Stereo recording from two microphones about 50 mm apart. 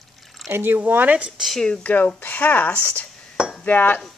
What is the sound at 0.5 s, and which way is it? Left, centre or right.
Speech, right.